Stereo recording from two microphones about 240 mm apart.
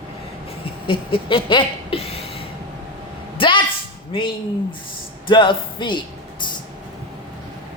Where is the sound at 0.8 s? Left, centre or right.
Left.